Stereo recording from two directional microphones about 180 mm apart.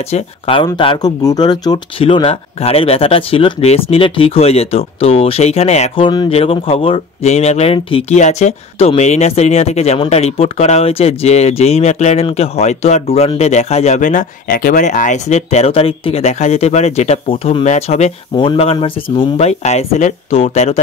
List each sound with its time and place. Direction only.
0.1 s speech: 30° left (ahead or behind)
18.3 s speech: 25° left (ahead or behind)